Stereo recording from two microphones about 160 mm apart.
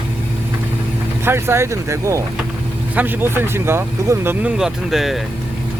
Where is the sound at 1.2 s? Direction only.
15° right (ahead or behind).